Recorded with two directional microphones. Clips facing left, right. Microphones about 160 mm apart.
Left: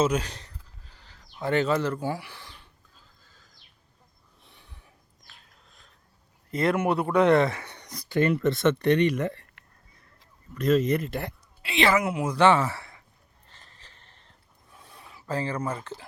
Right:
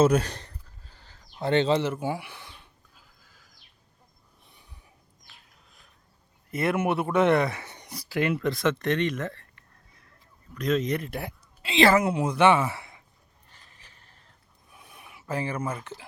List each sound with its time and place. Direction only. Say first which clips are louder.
0.0 s speech: right 4 dB; 55° right (ahead or behind)
0.3 s a sound: right 2 dB; 40° right (ahead or behind)
1.5 s neigh: right 1 dB; 25° right (ahead or behind); by 3.5 s 10° right (ahead or behind)
4.5 s a sound: left 2 dB; 10° right (ahead or behind)
6.5 s speech: left 1 dB; 20° right (ahead or behind)
7.7 s speech: left 3 dB; 10° right (ahead or behind); by 9.5 s 10° left (ahead or behind)
10.5 s speech: left 3 dB; 5° left (ahead or behind)
11.6 s a woman's voice: right 3 dB; 25° right (ahead or behind)
12.5 s speech: even; 10° right (ahead or behind)
13.5 s a sound: left 2 dB; 15° right (ahead or behind)